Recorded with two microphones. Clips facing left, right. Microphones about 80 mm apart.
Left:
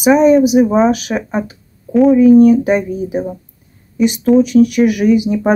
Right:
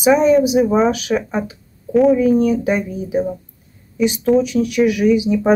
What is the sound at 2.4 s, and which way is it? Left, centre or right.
Speech, left.